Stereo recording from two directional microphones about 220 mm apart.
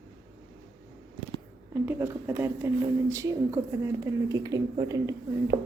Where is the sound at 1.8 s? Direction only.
10° right (ahead or behind).